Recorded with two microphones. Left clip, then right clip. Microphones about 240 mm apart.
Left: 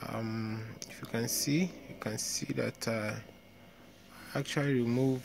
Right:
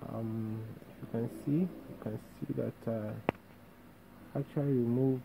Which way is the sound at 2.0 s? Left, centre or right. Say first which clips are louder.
Left 7 dB; left.